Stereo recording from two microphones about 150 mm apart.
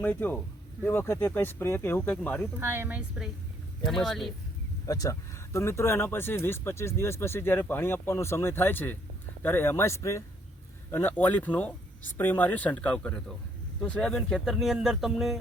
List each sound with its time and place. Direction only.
0.0 s speech: 10° left (ahead or behind)
2.6 s speech: 15° right (ahead or behind)
3.8 s speech: centre (ahead or behind)
4.9 s speech: 25° left (ahead or behind); by 15.4 s centre (ahead or behind)